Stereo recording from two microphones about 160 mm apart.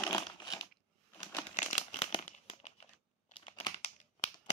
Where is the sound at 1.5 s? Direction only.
45° left (ahead or behind).